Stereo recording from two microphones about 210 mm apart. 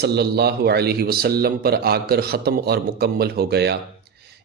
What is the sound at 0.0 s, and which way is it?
A man's voice, 50° right (ahead or behind).